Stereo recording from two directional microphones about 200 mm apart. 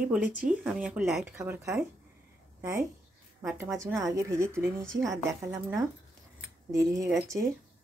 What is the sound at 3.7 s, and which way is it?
Speech, 15° right (ahead or behind).